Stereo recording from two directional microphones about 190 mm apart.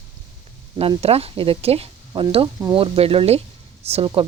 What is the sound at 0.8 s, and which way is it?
Speech, 30° right (ahead or behind).